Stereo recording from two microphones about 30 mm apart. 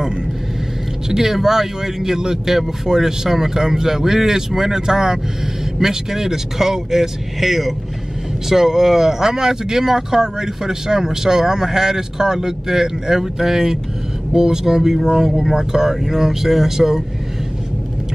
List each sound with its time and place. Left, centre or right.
1.0 s speech: centre